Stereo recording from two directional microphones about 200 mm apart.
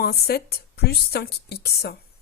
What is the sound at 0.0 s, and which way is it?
Speech, 50° left (ahead or behind).